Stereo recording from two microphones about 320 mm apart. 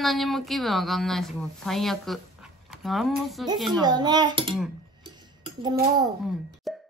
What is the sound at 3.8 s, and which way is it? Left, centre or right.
Speech, centre.